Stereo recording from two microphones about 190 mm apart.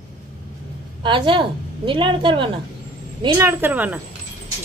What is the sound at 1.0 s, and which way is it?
A woman's voice, 25° right (ahead or behind).